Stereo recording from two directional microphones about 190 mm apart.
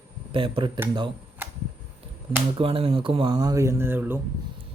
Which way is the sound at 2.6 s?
30° right (ahead or behind).